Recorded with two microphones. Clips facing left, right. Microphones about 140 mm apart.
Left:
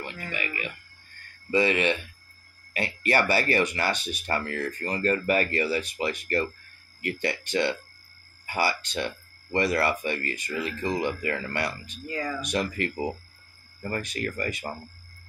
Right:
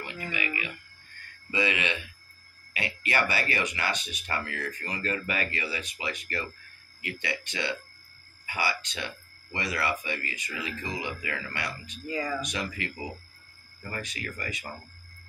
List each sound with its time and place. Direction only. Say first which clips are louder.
1.5 s speech: left 6 dB; 40° left (ahead or behind)
12.1 s speech: even; 5° right (ahead or behind)
12.4 s speech: left 6 dB; 50° left (ahead or behind)